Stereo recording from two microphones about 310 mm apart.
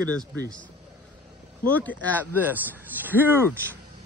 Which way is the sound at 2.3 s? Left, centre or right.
Centre.